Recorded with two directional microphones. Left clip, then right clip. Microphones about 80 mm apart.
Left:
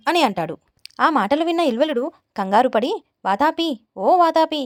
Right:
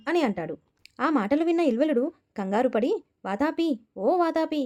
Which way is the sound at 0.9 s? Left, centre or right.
Centre.